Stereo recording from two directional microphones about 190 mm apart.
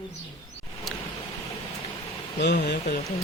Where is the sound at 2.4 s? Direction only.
65° left (ahead or behind).